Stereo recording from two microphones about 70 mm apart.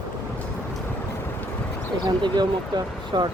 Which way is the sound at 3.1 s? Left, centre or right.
Right.